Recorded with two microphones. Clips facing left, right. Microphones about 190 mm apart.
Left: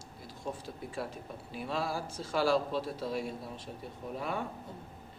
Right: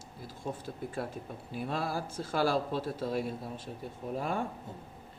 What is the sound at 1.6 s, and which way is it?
A man's voice, 55° right (ahead or behind).